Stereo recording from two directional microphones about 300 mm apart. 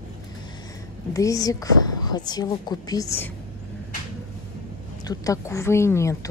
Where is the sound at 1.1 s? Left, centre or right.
Centre.